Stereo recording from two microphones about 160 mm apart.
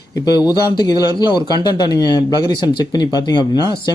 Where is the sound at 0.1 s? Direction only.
25° left (ahead or behind).